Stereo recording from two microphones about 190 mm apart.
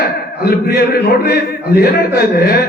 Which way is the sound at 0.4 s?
55° left (ahead or behind).